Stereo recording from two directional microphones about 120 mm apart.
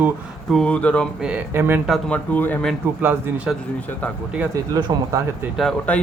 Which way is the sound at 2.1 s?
15° left (ahead or behind).